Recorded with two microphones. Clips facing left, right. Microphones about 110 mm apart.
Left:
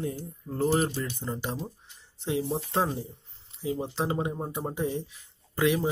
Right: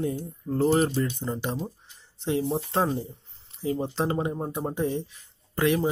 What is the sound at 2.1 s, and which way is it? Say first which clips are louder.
Speech: right 3 dB; 5° left (ahead or behind).